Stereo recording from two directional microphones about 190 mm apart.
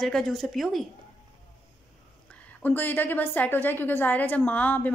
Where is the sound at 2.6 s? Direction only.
10° left (ahead or behind).